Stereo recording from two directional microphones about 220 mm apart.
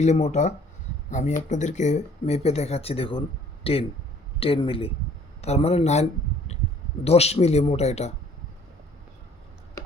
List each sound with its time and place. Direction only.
0.0 s speech: 30° left (ahead or behind)